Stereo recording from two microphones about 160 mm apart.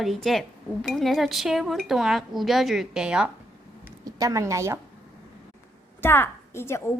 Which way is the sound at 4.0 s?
20° right (ahead or behind).